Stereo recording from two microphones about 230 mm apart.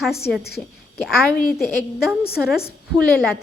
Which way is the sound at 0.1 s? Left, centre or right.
Left.